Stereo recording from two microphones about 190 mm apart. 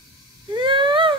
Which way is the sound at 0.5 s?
25° right (ahead or behind).